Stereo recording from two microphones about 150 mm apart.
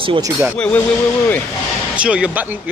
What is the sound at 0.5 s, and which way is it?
Speech, 10° left (ahead or behind).